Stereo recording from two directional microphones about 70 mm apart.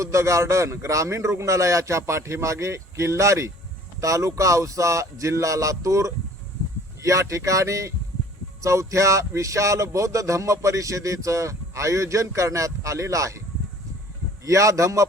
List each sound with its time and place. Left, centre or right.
0.0 s speech: right
14.4 s speech: right